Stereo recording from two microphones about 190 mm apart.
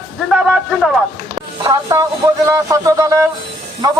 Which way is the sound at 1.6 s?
20° right (ahead or behind).